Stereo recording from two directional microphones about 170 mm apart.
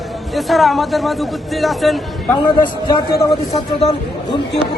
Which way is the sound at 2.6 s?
25° left (ahead or behind).